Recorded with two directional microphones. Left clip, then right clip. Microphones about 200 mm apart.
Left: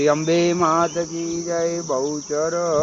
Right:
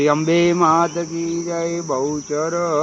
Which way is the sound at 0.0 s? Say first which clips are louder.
Right 2 dB; 40° right (ahead or behind).